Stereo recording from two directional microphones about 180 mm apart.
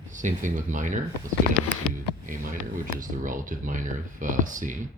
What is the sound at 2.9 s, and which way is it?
Speech, 50° right (ahead or behind).